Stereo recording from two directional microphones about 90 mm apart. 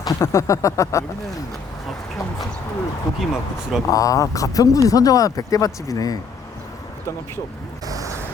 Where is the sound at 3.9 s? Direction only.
40° left (ahead or behind).